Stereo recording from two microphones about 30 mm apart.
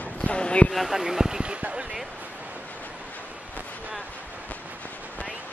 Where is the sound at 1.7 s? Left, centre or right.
Right.